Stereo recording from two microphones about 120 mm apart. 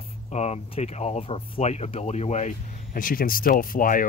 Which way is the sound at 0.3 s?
65° left (ahead or behind).